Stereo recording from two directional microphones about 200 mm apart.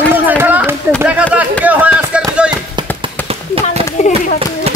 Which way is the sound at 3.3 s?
30° right (ahead or behind).